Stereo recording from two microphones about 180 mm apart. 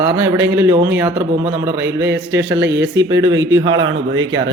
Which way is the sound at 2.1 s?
75° right (ahead or behind).